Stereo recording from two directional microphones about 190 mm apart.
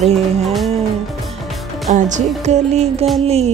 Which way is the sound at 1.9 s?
40° right (ahead or behind).